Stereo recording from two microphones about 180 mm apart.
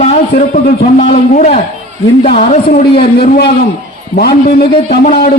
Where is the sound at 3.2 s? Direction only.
65° left (ahead or behind).